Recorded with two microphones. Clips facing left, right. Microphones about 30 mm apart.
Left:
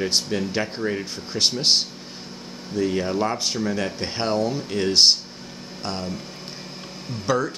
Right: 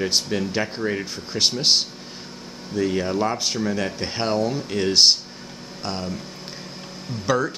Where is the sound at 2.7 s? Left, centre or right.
Centre.